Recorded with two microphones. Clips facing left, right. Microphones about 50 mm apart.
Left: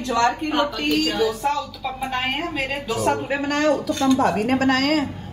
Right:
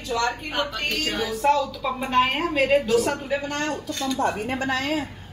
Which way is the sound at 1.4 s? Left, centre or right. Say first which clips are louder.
Right 3 dB; centre.